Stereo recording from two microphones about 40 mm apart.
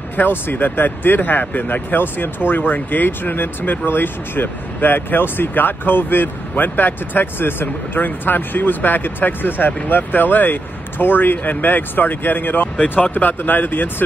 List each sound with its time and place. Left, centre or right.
0.2 s speech: left